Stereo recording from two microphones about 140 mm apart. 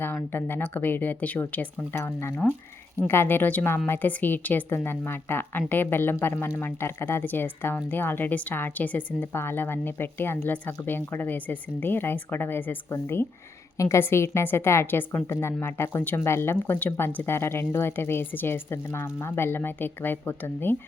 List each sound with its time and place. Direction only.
0.0 s a woman's voice: 15° left (ahead or behind)
2.4 s speech: centre (ahead or behind)
3.1 s a woman's voice: 15° left (ahead or behind)